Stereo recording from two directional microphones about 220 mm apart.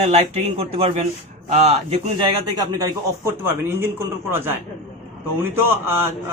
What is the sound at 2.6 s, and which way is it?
A man's voice, 15° right (ahead or behind).